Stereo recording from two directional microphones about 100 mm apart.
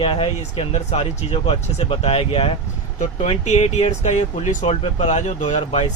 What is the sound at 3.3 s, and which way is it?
Speech, 90° left.